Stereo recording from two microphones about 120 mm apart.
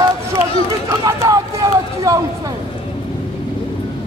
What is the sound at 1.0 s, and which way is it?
Speech, 30° right (ahead or behind).